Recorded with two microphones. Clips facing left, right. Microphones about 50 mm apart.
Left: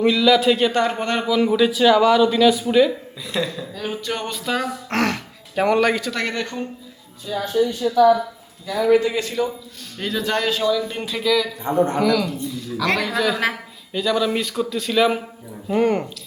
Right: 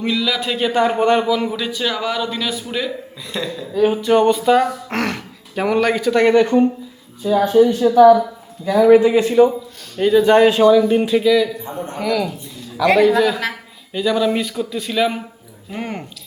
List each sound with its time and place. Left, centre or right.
0.0 s a man's voice: centre
1.3 s a man's voice: centre
3.8 s speech: centre
7.3 s speech: right
8.9 s speech: centre
10.8 s speech: centre
11.7 s a woman's voice: left
12.0 s a man's voice: centre